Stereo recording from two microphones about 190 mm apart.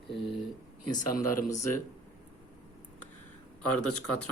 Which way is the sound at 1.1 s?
45° left (ahead or behind).